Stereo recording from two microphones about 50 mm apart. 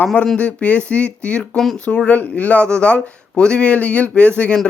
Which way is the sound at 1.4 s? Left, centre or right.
Centre.